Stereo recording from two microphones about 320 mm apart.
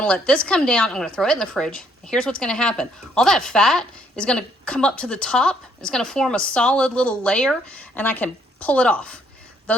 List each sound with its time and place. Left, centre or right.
0.0 s speech: centre